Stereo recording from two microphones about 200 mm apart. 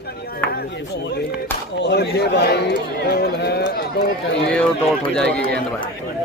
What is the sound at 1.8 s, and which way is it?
Speech, 55° left (ahead or behind).